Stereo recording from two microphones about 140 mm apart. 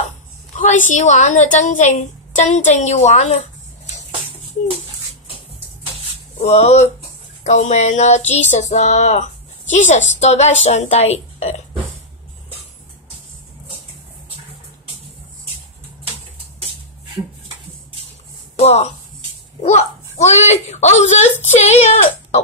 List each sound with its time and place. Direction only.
0.6 s a woman's voice: 65° left (ahead or behind)
6.3 s a woman's voice: 50° left (ahead or behind)
18.6 s speech: 50° left (ahead or behind)